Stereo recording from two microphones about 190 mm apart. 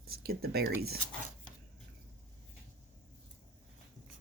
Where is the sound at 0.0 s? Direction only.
55° right (ahead or behind).